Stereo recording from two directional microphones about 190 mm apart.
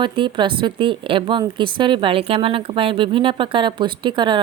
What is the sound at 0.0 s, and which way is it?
Speech, 25° right (ahead or behind).